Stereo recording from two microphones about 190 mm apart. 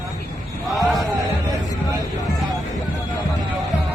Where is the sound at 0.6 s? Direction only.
Centre (ahead or behind).